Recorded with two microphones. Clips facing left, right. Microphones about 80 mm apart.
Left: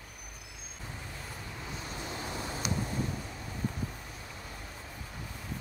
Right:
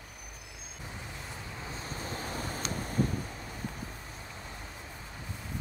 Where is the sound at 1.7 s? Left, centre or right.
Right.